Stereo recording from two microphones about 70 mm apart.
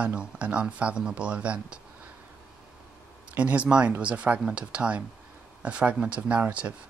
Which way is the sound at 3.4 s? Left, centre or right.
Centre.